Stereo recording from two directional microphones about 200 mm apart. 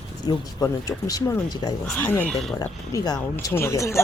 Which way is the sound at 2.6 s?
20° left (ahead or behind).